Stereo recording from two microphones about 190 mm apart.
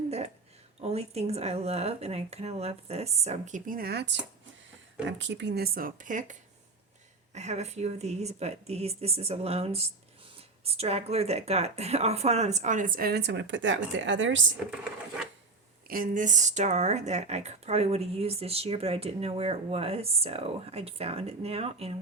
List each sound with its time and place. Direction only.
0.8 s a woman's voice: 35° right (ahead or behind)
7.3 s a woman's voice: 35° right (ahead or behind); by 14.5 s 80° right
15.9 s a woman's voice: 45° right (ahead or behind)